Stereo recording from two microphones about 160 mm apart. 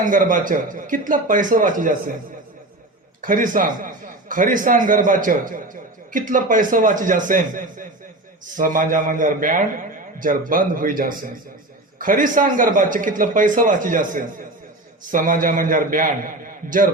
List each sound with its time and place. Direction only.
0.0 s a man's voice: 55° right (ahead or behind)
3.2 s a man's voice: 60° right (ahead or behind)